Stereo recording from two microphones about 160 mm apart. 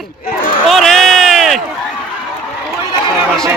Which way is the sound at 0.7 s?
Centre (ahead or behind).